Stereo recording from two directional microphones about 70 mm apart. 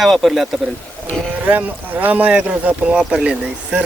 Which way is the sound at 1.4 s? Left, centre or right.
Right.